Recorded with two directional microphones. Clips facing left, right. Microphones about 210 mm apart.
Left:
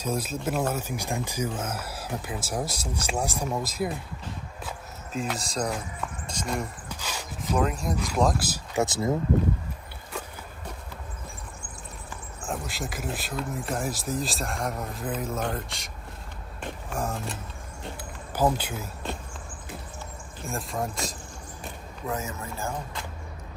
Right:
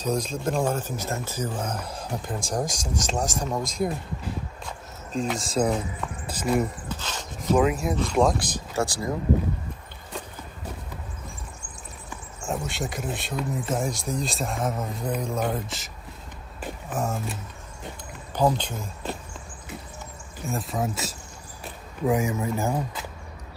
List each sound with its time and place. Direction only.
0.0 s speech: 5° left (ahead or behind)
5.3 s speech: centre (ahead or behind)
6.9 s a sound: 10° left (ahead or behind)
7.5 s speech: 5° right (ahead or behind)
8.7 s speech: 20° left (ahead or behind)
12.4 s speech: centre (ahead or behind)
16.6 s a sound: centre (ahead or behind)
18.3 s speech: 5° left (ahead or behind)
20.4 s speech: centre (ahead or behind)
22.0 s a man's voice: 15° right (ahead or behind)